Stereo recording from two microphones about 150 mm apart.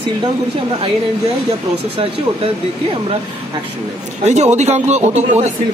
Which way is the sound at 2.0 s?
40° right (ahead or behind).